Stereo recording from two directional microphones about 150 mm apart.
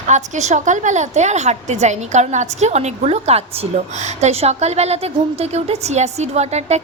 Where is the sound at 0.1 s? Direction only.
50° right (ahead or behind).